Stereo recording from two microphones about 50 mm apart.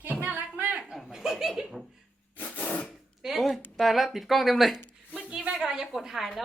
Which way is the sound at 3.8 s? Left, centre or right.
Centre.